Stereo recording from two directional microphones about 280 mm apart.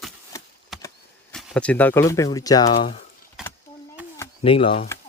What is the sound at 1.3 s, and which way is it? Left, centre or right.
Speech, centre.